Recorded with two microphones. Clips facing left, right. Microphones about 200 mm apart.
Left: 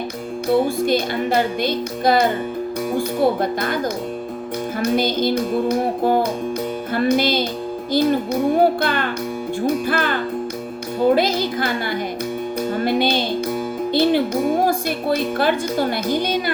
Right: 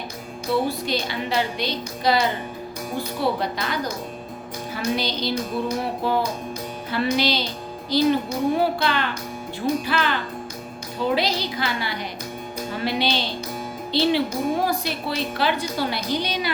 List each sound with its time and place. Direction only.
0.5 s a woman's voice: 50° left (ahead or behind)
4.9 s a woman's voice: 50° left (ahead or behind)